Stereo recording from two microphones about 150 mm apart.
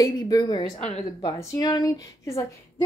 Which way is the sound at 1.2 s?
25° left (ahead or behind).